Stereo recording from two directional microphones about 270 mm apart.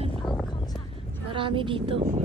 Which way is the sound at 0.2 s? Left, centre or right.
Centre.